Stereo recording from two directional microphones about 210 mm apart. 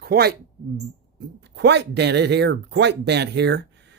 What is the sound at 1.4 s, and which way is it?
Speech, 55° right (ahead or behind).